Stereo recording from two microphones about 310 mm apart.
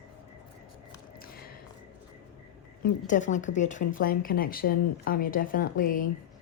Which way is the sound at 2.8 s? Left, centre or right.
Left.